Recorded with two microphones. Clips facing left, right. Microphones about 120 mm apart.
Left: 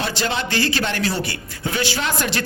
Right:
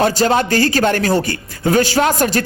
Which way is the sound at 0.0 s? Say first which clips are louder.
Right 9 dB; 45° right (ahead or behind).